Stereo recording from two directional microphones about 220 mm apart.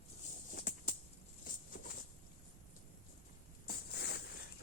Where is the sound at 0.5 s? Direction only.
35° left (ahead or behind).